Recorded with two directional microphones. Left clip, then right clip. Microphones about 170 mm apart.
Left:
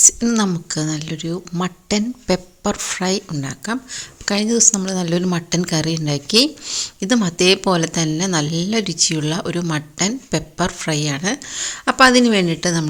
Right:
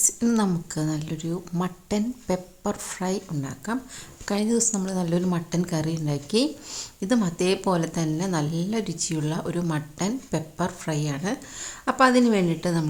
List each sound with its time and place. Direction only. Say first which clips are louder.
0.3 s speech: left 6 dB; 15° left (ahead or behind)
6.7 s speech: left 7 dB; 10° left (ahead or behind)